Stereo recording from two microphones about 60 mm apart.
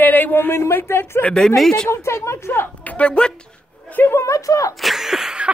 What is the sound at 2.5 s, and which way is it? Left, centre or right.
Speech, left.